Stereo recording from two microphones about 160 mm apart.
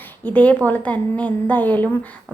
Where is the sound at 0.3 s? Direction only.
10° left (ahead or behind).